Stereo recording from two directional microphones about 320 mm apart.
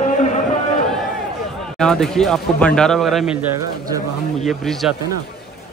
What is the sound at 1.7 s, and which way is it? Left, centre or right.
Speech, centre.